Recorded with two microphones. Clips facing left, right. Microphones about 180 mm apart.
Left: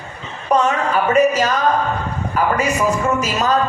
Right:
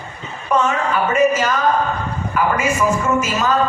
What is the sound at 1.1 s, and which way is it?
Music, 35° left (ahead or behind).